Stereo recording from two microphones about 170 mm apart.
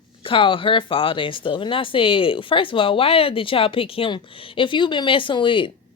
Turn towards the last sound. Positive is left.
turn(degrees=30)  # may be behind; listen again after turning